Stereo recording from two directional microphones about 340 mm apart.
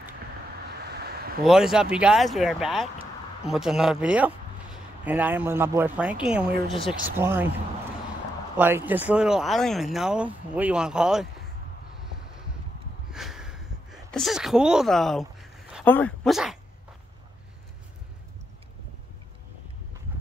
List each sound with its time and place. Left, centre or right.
0.9 s vehicle: right
1.4 s speech: centre
8.5 s speech: centre
13.1 s a sound: centre
14.1 s speech: centre